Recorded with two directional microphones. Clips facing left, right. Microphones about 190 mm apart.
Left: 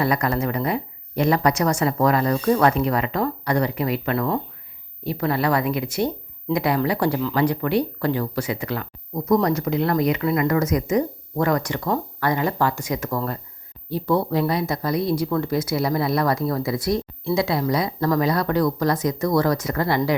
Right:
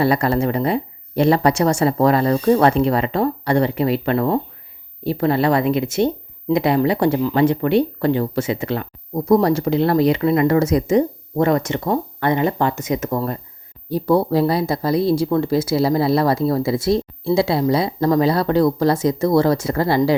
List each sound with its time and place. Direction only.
0.0 s speech: 30° right (ahead or behind)
13.9 s speech: 35° right (ahead or behind)